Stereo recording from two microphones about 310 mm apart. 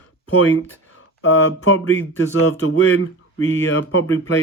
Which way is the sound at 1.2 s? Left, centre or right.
Left.